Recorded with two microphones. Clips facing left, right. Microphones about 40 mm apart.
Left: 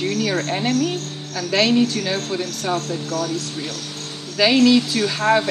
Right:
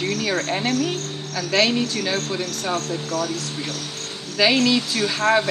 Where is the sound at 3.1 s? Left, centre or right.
Centre.